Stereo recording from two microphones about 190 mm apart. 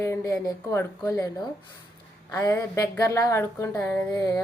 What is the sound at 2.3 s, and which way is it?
A woman's voice, 15° left (ahead or behind).